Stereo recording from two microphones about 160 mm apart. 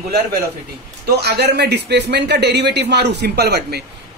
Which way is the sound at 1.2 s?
90° right.